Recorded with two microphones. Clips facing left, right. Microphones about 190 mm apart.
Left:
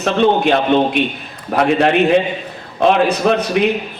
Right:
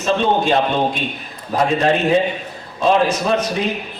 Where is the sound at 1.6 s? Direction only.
70° left (ahead or behind).